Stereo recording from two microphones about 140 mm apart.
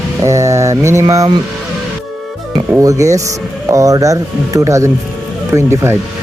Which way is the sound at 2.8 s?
25° right (ahead or behind).